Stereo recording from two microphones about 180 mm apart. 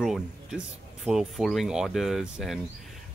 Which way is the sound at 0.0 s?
Centre (ahead or behind).